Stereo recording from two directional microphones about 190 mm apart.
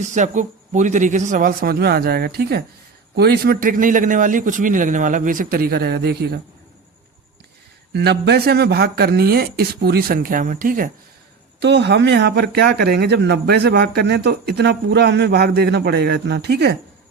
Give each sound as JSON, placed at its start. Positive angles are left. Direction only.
{"t": 0.0, "sound": "a man's voice", "side_deg": -40}
{"t": 7.9, "sound": "speech", "side_deg": -60}
{"t": 11.6, "sound": "speech", "side_deg": -65}